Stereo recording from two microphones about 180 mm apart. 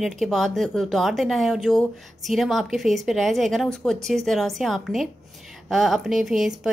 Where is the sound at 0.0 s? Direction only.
Centre (ahead or behind).